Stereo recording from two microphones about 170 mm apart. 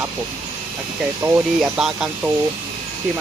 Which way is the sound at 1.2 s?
20° right (ahead or behind).